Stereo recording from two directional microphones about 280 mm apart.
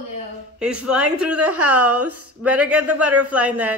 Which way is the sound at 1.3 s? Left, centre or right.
Right.